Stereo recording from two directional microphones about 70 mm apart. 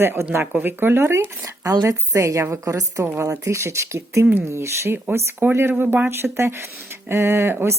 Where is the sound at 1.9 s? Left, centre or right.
Right.